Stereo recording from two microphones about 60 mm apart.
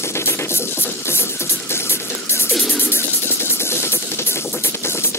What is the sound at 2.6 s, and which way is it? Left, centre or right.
Music, left.